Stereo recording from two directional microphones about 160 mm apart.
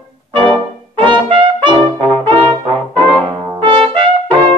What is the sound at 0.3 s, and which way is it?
Trumpet, 30° right (ahead or behind).